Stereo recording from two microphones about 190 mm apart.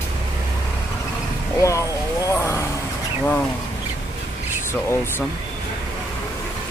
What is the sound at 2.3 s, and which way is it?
Roaring cats, 15° left (ahead or behind).